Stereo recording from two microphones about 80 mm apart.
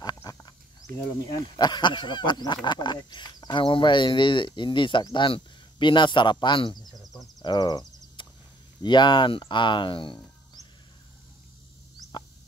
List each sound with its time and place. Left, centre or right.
0.0 s wild animals: left
1.3 s speech: left
6.9 s insect: centre
7.4 s speech: left
8.2 s a sound: left
8.8 s speech: left